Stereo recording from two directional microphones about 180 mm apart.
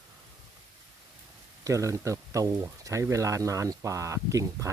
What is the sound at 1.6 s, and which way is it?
Speech, 15° right (ahead or behind).